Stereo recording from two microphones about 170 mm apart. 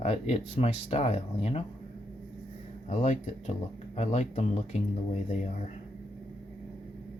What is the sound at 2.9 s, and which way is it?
Speech, 45° left (ahead or behind).